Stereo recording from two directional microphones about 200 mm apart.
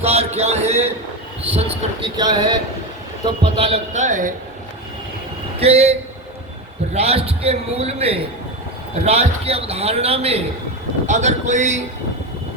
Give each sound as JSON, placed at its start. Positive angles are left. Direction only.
{"t": 0.0, "sound": "a man's voice", "side_deg": -30}
{"t": 5.5, "sound": "a man's voice", "side_deg": -30}
{"t": 6.9, "sound": "a man's voice", "side_deg": -30}